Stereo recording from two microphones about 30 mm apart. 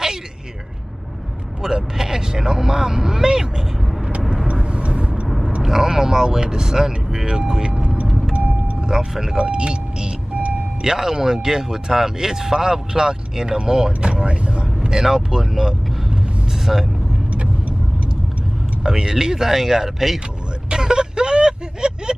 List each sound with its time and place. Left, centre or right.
1.6 s speech: centre
4.7 s vehicle: right
5.6 s speech: centre
8.3 s vehicle: right
8.9 s speech: centre
9.4 s speech: right
10.8 s speech: centre
14.2 s speech: right
14.9 s speech: centre
16.7 s speech: centre
17.3 s vehicle: right
18.9 s speech: right
20.7 s vehicle: right